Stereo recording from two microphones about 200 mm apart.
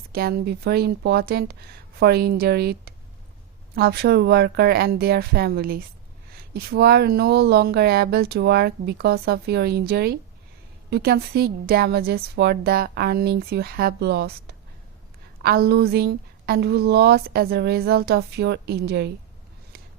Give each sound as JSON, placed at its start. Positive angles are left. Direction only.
{"t": 0.1, "sound": "a woman's voice", "side_deg": -50}